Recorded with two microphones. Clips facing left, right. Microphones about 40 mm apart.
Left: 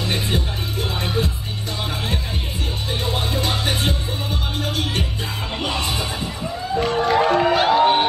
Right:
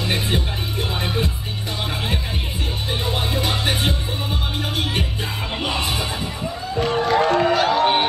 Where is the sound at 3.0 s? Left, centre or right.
Centre.